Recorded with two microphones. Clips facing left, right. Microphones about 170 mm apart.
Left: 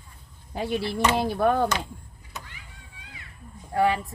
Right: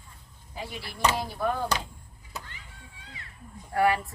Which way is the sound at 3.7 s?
20° left (ahead or behind).